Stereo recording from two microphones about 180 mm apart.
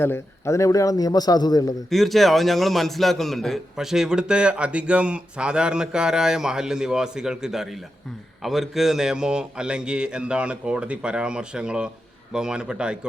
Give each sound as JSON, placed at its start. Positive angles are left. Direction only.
{"t": 0.0, "sound": "a man's voice", "side_deg": 15}
{"t": 1.9, "sound": "a man's voice", "side_deg": 0}